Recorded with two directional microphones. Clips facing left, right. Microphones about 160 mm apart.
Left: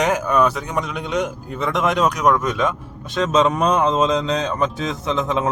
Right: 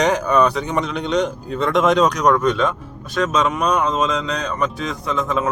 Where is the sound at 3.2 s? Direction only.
30° left (ahead or behind).